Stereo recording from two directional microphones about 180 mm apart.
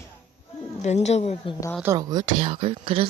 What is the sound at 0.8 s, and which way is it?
Speech, 40° left (ahead or behind).